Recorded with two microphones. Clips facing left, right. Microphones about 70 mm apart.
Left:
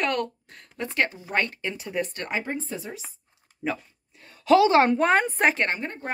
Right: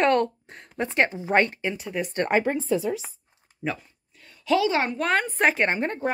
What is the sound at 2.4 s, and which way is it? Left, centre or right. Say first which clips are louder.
Speech: right 8 dB; right.